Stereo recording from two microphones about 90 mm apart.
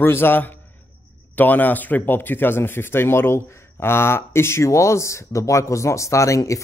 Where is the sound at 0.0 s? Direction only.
25° left (ahead or behind).